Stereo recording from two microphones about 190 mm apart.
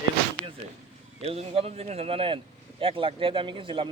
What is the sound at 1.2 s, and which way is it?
Speech, 30° right (ahead or behind).